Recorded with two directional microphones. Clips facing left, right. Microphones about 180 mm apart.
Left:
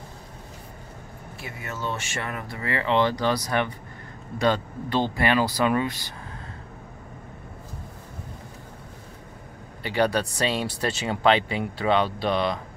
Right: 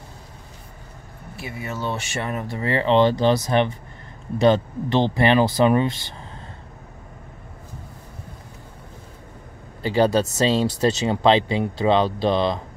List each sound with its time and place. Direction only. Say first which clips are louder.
1.7 s speech: right 3 dB; 20° right (ahead or behind)
9.8 s speech: right 5 dB; 25° right (ahead or behind)